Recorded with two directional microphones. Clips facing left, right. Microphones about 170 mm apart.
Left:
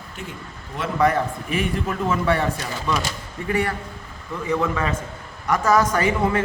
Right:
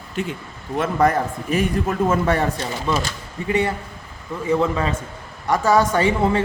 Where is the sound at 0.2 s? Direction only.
90° right.